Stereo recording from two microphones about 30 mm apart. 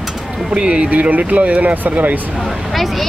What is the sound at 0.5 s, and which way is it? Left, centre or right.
Speech, right.